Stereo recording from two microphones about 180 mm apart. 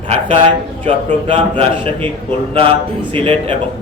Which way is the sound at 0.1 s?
30° right (ahead or behind).